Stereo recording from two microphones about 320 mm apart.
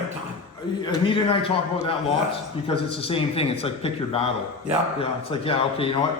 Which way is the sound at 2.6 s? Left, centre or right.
Centre.